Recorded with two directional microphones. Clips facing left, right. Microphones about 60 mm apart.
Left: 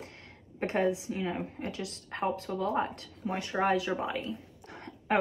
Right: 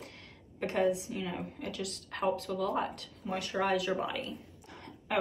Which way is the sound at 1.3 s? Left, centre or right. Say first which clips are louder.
Left 3 dB; left.